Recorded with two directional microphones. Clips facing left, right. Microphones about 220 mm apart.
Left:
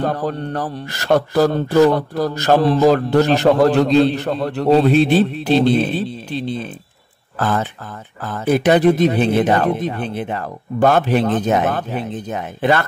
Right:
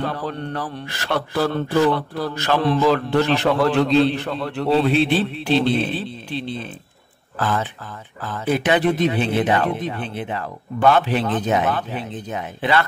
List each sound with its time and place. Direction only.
0.0 s speech: 45° left (ahead or behind)